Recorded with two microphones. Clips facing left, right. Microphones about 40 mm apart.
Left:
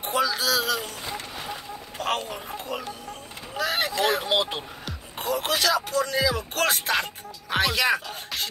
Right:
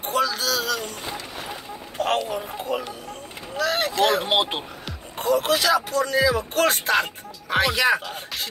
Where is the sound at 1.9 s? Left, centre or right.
Centre.